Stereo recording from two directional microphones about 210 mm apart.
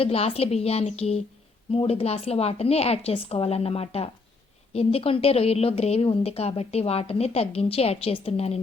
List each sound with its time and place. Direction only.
0.0 s a woman's voice: 30° left (ahead or behind)